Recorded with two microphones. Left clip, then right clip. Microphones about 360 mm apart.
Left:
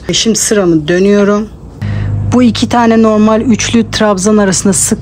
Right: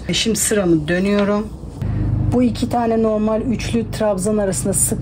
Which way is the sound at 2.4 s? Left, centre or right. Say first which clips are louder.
Left 10 dB; left.